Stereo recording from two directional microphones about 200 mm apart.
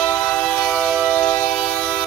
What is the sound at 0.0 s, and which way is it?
Train, 10° left (ahead or behind).